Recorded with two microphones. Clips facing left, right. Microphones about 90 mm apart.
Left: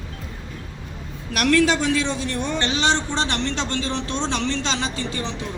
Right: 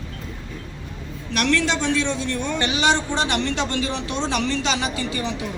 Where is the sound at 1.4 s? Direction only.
5° left (ahead or behind).